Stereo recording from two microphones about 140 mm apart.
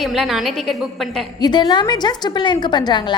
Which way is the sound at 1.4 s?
30° left (ahead or behind).